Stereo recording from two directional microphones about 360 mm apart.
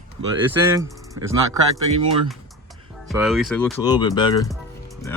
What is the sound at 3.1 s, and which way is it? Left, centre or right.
Speech, centre.